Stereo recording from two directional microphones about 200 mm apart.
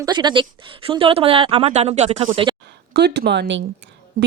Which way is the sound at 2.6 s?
55° right (ahead or behind).